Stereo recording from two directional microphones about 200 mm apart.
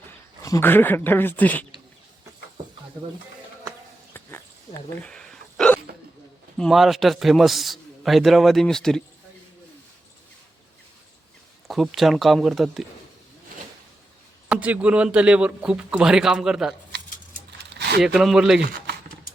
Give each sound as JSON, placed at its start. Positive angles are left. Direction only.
{"t": 0.4, "sound": "speech", "side_deg": 15}
{"t": 4.1, "sound": "hiccup", "side_deg": 10}
{"t": 6.6, "sound": "a man's voice", "side_deg": 0}
{"t": 11.7, "sound": "a man's voice", "side_deg": 0}
{"t": 14.5, "sound": "a man's voice", "side_deg": -5}
{"t": 17.7, "sound": "a sound", "side_deg": -55}
{"t": 18.0, "sound": "a man's voice", "side_deg": 0}